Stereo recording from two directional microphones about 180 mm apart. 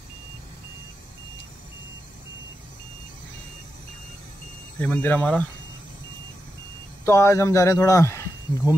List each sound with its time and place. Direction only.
4.7 s speech: 10° left (ahead or behind)
7.1 s speech: 15° left (ahead or behind)